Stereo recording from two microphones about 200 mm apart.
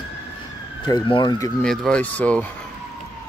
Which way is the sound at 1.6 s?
5° left (ahead or behind).